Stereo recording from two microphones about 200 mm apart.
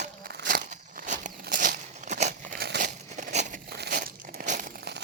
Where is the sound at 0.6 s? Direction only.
40° right (ahead or behind).